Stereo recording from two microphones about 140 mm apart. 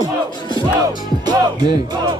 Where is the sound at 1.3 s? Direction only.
30° right (ahead or behind).